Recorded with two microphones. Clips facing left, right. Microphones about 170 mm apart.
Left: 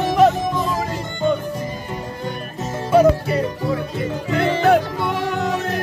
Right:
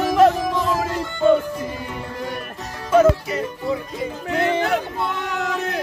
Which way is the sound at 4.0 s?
70° left (ahead or behind).